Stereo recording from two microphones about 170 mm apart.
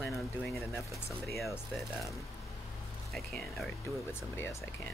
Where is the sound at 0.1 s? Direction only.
Centre (ahead or behind).